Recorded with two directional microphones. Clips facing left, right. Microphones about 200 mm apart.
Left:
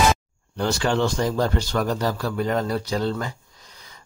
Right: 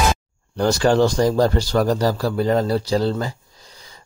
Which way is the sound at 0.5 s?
40° right (ahead or behind).